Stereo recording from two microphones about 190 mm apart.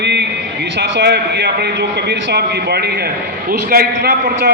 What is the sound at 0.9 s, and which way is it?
A man's voice, 60° right (ahead or behind).